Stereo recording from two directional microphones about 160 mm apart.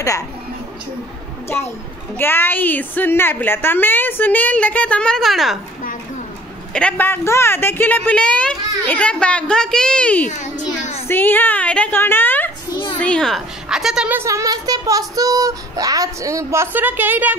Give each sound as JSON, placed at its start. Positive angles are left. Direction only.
{"t": 1.5, "sound": "a woman's voice", "side_deg": 10}
{"t": 6.7, "sound": "a woman's voice", "side_deg": 5}
{"t": 10.2, "sound": "a child's voice", "side_deg": 50}
{"t": 11.1, "sound": "a woman's voice", "side_deg": 10}